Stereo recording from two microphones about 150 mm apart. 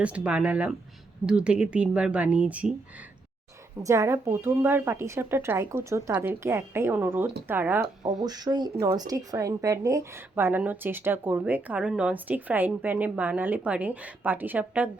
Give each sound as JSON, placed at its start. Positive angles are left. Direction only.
{"t": 0.0, "sound": "speech", "side_deg": -10}
{"t": 3.8, "sound": "speech", "side_deg": -20}
{"t": 8.2, "sound": "speech", "side_deg": -25}